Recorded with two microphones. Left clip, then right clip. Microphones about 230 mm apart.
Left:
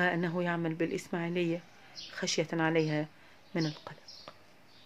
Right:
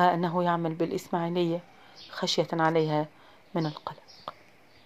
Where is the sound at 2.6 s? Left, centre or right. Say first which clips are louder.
Right 5 dB; centre.